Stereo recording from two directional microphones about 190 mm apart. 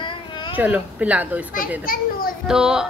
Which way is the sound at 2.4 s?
5° right (ahead or behind).